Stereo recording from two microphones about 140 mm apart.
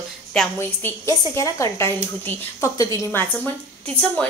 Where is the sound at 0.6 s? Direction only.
20° left (ahead or behind).